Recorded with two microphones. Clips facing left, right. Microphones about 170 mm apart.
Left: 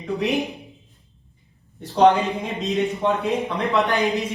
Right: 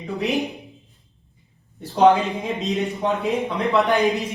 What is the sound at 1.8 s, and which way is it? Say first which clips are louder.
Speech: even; centre (ahead or behind).